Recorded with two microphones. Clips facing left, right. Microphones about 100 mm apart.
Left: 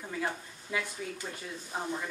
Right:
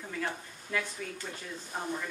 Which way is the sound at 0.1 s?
15° left (ahead or behind).